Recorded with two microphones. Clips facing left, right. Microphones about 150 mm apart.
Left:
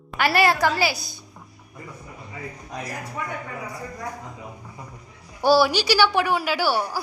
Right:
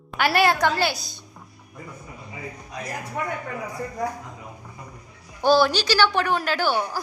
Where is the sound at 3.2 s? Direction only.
90° right.